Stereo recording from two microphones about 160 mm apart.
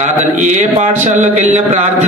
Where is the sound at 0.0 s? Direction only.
50° right (ahead or behind).